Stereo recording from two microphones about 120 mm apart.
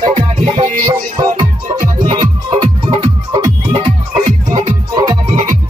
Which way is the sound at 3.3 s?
40° right (ahead or behind).